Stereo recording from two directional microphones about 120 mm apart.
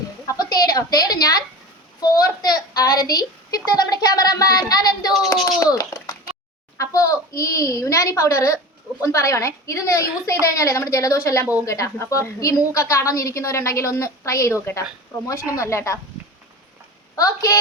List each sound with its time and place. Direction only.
0.3 s a woman's voice: 30° left (ahead or behind)
17.2 s a woman's voice: 30° left (ahead or behind)